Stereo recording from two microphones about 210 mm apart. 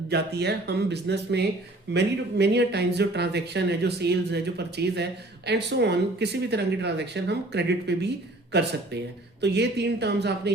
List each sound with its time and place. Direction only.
0.1 s speech: 50° right (ahead or behind)